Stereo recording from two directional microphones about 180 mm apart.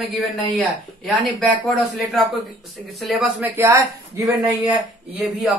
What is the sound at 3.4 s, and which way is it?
Speech, 15° right (ahead or behind).